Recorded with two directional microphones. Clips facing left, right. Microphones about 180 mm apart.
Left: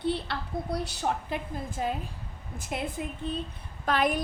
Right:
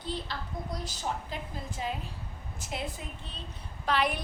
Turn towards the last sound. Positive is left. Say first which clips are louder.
# left 3 dB
turn(degrees=45)  # may be behind; listen again after turning